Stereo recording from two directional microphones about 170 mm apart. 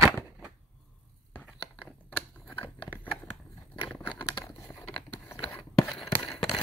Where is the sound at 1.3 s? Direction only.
10° left (ahead or behind).